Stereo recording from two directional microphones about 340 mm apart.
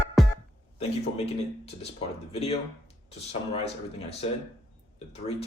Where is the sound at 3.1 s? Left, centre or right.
Centre.